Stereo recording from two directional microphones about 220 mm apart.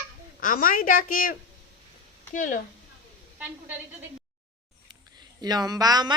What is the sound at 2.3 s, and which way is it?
Speech, 40° left (ahead or behind).